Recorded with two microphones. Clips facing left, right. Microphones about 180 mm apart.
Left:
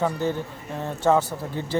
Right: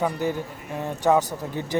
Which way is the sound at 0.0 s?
15° right (ahead or behind).